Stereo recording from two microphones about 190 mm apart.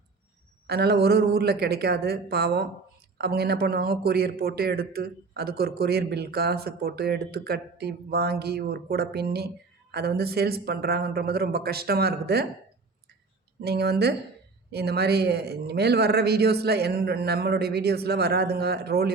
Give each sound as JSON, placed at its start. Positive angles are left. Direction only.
{"t": 0.7, "sound": "a man's voice", "side_deg": -55}
{"t": 13.6, "sound": "a man's voice", "side_deg": -60}